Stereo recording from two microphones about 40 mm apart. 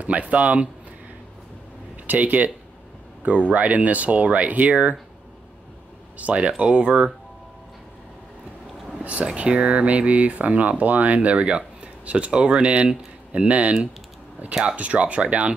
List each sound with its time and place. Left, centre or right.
0.0 s speech: right
2.0 s speech: right
6.1 s speech: right
9.0 s speech: right
14.8 s speech: right